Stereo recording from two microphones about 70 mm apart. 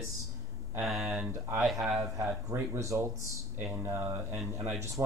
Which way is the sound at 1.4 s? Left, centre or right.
Right.